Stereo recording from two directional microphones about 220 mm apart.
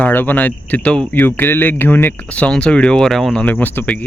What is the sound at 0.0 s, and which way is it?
Speech, 10° left (ahead or behind).